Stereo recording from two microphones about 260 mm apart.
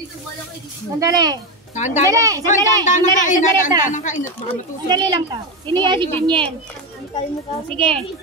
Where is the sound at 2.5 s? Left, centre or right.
Left.